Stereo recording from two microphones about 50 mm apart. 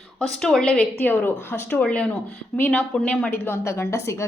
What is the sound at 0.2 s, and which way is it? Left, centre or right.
Speech, centre.